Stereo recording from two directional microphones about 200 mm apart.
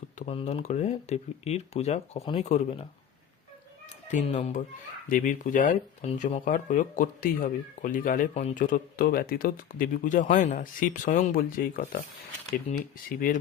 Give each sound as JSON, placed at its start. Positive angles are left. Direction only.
{"t": 0.2, "sound": "speech", "side_deg": 30}
{"t": 4.1, "sound": "speech", "side_deg": 35}
{"t": 12.7, "sound": "speech", "side_deg": 35}